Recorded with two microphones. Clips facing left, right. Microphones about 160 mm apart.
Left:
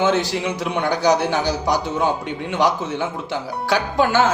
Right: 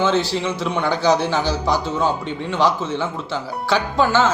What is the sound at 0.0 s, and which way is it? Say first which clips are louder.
A man's voice: even; 15° left (ahead or behind).